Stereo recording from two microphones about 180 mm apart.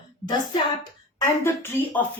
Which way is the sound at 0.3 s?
25° left (ahead or behind).